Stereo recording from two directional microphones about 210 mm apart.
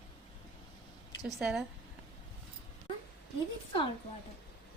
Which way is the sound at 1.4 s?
Centre (ahead or behind).